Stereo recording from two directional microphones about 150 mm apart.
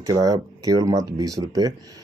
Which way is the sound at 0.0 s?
25° right (ahead or behind).